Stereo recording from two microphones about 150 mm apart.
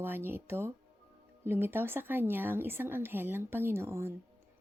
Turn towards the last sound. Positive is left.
turn(degrees=-15)  # may be behind; listen again after turning